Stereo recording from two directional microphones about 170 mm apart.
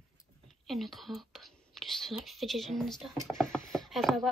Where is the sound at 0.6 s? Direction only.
Centre (ahead or behind).